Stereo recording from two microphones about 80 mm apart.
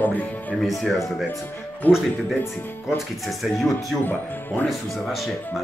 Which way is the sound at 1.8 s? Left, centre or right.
Left.